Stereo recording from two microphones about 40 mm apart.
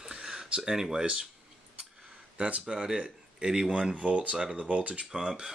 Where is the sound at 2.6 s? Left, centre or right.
Centre.